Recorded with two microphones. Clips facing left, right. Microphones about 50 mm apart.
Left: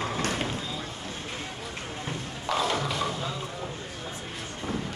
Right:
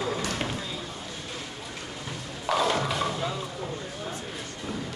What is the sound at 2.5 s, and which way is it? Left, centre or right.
Music, centre.